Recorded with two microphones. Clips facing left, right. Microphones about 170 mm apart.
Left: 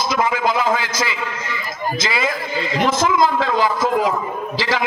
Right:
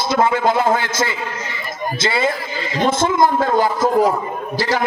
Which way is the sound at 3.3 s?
45° right (ahead or behind).